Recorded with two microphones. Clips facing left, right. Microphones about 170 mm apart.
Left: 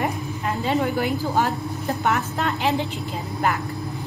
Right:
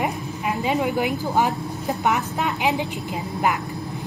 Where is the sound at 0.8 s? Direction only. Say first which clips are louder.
Even; 15° right (ahead or behind).